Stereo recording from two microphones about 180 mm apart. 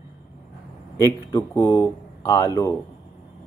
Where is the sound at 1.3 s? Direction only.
20° left (ahead or behind).